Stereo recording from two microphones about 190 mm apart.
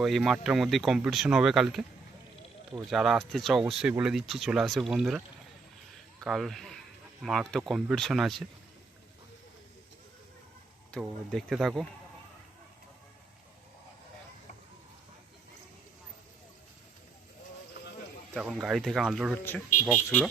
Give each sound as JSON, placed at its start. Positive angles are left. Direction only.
{"t": 0.0, "sound": "speech", "side_deg": 0}
{"t": 10.9, "sound": "speech", "side_deg": 0}
{"t": 18.3, "sound": "speech", "side_deg": 0}